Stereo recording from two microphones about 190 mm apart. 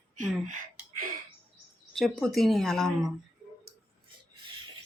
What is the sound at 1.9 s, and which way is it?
Speech, centre (ahead or behind).